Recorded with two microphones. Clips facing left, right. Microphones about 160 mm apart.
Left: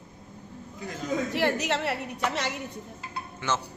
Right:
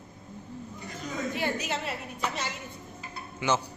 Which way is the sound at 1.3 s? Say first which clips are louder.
Left 5 dB; 75° left (ahead or behind).